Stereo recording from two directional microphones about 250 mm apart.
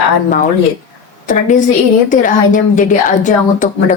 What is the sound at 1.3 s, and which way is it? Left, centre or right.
A woman's voice, left.